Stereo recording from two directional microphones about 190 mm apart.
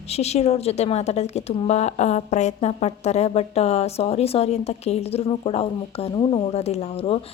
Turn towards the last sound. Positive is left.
turn(degrees=30)  # may be behind; listen again after turning